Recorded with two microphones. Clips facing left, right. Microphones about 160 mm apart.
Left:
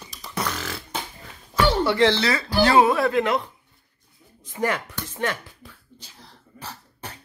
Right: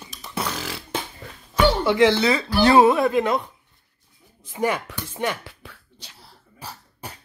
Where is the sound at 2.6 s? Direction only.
25° right (ahead or behind).